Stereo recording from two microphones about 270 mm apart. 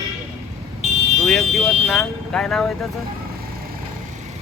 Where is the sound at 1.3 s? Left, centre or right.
Centre.